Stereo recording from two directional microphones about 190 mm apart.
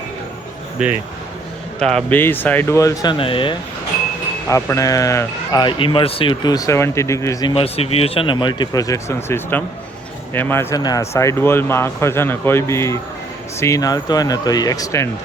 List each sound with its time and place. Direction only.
1.8 s speech: 5° left (ahead or behind); by 3.5 s 25° left (ahead or behind)
4.4 s speech: 15° left (ahead or behind)
7.5 s speech: 30° left (ahead or behind)